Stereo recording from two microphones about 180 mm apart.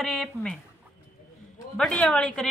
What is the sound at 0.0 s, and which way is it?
Speech, 5° left (ahead or behind).